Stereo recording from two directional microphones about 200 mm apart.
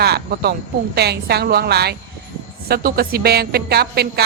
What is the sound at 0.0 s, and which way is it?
A woman's voice, 55° right (ahead or behind).